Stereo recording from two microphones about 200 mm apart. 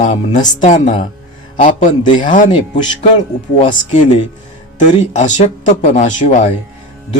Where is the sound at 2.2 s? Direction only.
40° left (ahead or behind).